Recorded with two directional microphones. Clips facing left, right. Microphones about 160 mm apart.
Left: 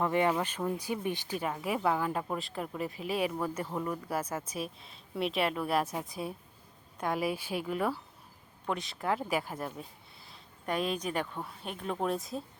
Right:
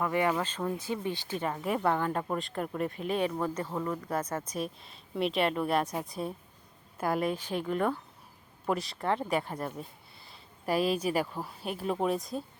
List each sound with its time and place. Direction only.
0.0 s speech: 20° left (ahead or behind)
1.5 s speech: 5° left (ahead or behind)